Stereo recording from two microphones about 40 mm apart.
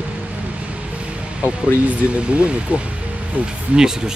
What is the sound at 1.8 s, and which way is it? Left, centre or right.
Speech, right.